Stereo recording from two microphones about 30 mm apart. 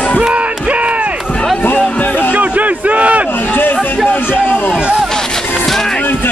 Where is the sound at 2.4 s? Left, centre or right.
Right.